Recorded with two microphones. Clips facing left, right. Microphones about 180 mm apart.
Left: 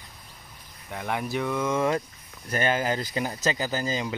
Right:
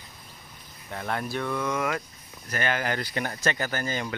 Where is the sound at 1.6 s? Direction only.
25° left (ahead or behind).